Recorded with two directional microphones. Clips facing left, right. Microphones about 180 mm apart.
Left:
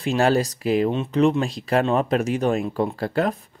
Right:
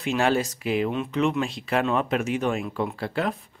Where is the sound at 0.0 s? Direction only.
35° left (ahead or behind).